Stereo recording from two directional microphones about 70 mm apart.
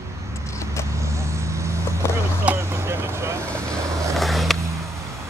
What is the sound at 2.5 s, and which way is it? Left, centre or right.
Vehicle, right.